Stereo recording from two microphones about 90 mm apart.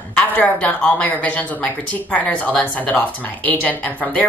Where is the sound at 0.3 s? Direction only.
20° left (ahead or behind).